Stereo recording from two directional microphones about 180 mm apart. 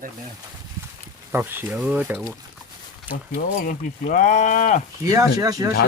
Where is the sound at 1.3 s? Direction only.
10° right (ahead or behind).